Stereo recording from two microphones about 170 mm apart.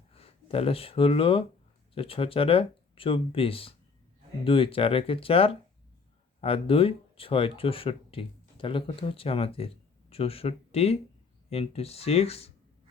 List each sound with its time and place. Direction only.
0.1 s speech: 35° left (ahead or behind)